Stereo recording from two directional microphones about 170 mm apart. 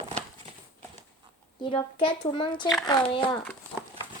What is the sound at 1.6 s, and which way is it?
Speech, 30° left (ahead or behind).